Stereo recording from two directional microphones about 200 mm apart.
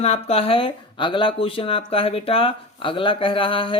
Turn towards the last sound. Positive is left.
turn(degrees=25)  # may be behind; listen again after turning